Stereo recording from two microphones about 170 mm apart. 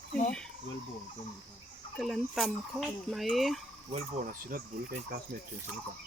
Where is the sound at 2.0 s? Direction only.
Centre (ahead or behind).